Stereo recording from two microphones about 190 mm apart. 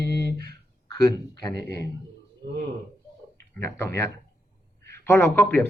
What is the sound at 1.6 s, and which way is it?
Speech, 55° right (ahead or behind).